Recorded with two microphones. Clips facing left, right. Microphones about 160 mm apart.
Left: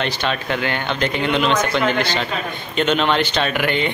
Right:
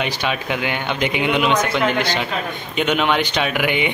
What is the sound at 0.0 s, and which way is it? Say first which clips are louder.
A man's voice: even; 10° right (ahead or behind).